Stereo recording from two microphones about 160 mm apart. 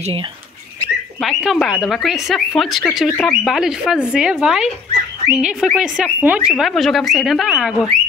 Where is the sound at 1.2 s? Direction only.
Centre (ahead or behind).